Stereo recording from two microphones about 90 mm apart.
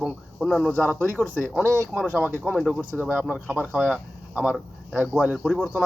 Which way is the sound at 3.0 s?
20° right (ahead or behind).